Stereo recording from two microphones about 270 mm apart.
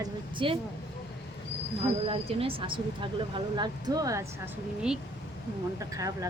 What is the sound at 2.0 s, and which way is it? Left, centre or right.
Speech, centre.